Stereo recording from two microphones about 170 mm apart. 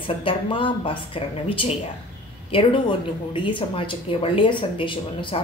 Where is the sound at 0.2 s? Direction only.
30° left (ahead or behind).